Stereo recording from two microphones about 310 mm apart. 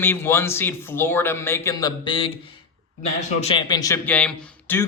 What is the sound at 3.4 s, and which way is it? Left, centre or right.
Speech, centre.